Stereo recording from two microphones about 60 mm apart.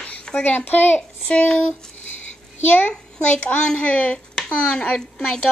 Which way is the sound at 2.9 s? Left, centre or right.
Centre.